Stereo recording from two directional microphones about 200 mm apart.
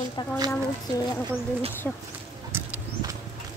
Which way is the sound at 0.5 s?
15° left (ahead or behind).